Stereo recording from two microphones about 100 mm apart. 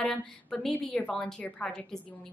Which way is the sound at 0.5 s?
Centre (ahead or behind).